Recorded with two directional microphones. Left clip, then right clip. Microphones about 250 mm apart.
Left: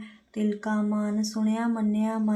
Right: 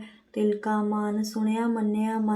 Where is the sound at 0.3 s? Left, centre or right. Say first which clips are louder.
Right 4 dB; left.